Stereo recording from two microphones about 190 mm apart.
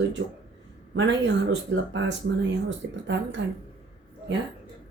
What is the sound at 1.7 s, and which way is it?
Speech, 70° right (ahead or behind).